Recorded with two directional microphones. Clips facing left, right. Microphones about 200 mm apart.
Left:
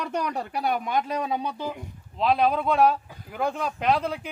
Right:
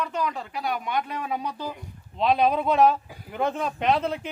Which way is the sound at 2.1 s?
Centre (ahead or behind).